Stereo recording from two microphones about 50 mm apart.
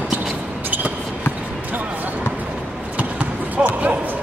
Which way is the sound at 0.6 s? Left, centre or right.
Right.